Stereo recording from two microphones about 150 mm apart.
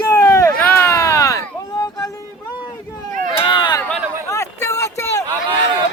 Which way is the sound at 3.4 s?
35° left (ahead or behind).